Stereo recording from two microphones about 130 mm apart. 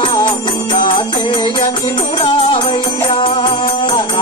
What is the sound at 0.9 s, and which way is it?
Music, 35° left (ahead or behind).